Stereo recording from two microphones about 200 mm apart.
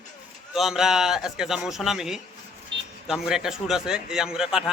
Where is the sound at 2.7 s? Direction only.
60° right (ahead or behind).